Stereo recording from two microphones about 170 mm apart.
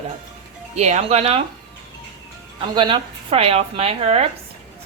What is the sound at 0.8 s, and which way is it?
Speech, 40° right (ahead or behind).